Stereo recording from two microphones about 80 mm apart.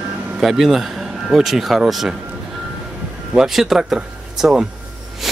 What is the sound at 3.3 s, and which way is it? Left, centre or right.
Speech, centre.